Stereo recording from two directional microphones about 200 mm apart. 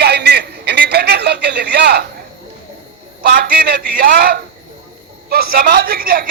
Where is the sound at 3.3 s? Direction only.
50° right (ahead or behind).